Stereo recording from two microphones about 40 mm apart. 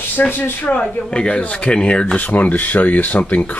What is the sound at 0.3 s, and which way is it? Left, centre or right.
Speech, left.